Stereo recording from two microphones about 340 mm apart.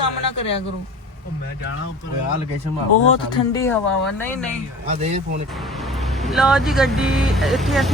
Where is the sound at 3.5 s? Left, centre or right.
Centre.